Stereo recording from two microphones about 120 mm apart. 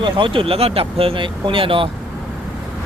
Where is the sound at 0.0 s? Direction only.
45° right (ahead or behind).